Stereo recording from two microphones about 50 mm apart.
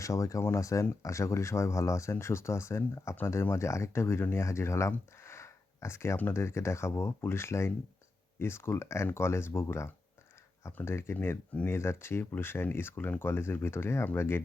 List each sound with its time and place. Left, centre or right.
0.0 s speech: left
2.1 s speech: left
3.5 s speech: left
4.4 s speech: left
5.1 s a sound: left
6.3 s speech: left